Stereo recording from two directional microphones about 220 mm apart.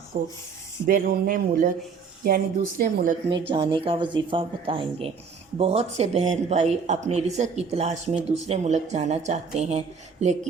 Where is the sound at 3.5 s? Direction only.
20° right (ahead or behind).